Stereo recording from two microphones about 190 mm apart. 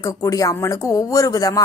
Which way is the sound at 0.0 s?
15° left (ahead or behind).